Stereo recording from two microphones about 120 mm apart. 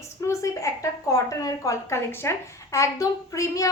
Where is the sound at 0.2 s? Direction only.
25° left (ahead or behind).